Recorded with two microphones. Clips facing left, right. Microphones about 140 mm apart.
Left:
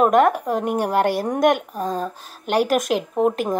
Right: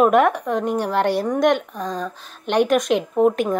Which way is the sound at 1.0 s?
45° left (ahead or behind).